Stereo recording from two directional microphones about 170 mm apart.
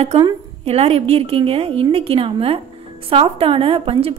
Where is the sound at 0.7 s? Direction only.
35° right (ahead or behind).